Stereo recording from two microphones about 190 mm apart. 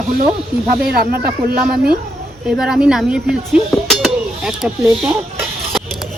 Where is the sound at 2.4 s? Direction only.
5° right (ahead or behind).